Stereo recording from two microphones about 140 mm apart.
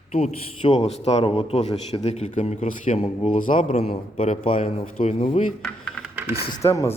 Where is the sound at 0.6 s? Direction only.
35° left (ahead or behind).